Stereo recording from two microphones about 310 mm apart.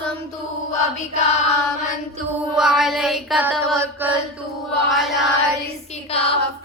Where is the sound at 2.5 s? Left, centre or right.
Centre.